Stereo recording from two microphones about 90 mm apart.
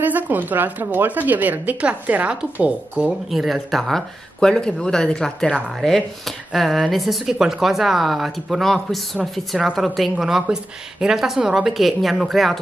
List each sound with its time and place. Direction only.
0.0 s a woman's voice: 20° right (ahead or behind)
3.3 s speech: centre (ahead or behind)